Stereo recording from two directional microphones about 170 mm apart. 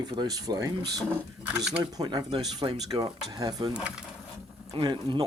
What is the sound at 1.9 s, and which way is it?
Speech, 25° right (ahead or behind).